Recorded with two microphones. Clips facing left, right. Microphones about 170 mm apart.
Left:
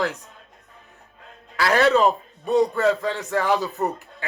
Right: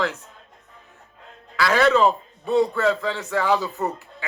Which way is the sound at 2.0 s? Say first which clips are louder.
Even; 15° left (ahead or behind).